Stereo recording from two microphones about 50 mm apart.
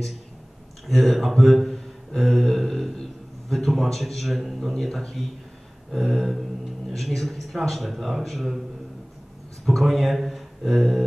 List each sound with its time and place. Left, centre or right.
0.8 s a man's voice: centre
9.7 s speech: centre